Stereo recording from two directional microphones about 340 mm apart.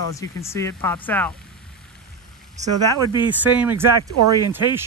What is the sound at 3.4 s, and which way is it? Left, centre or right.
Speech, centre.